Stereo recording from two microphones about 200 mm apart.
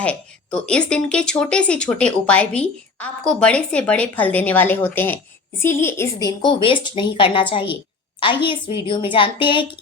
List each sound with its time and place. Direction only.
0.0 s a woman's voice: 5° left (ahead or behind); by 9.6 s 25° left (ahead or behind)